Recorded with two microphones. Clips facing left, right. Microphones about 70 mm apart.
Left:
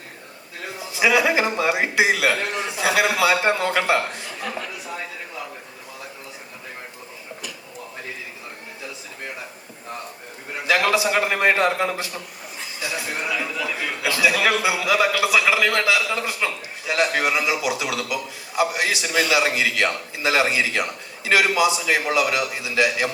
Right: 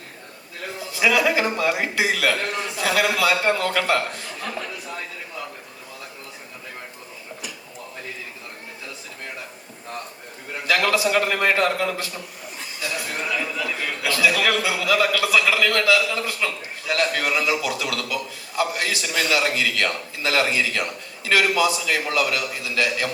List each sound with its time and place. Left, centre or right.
0.8 s a man's voice: left
10.7 s a man's voice: left